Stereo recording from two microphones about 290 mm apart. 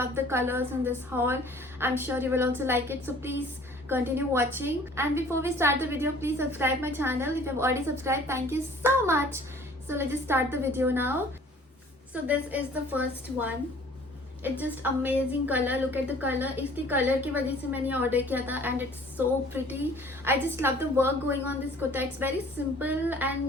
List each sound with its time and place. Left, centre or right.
0.0 s a woman's voice: centre
14.6 s a woman's voice: centre